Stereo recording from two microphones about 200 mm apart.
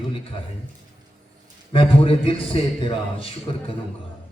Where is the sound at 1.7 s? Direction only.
25° left (ahead or behind).